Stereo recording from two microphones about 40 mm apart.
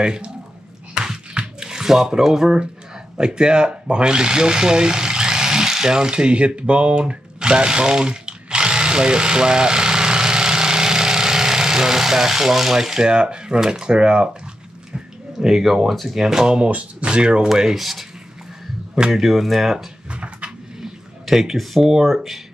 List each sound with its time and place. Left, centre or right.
0.0 s speech: right
1.3 s a sound: centre
3.2 s speech: right
15.4 s speech: centre
16.5 s speech: right
17.6 s speech: centre
19.1 s speech: centre
20.1 s a sound: right
20.8 s a sound: centre
22.0 s speech: centre